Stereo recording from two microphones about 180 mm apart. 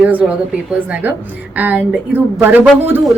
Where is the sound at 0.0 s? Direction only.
10° right (ahead or behind).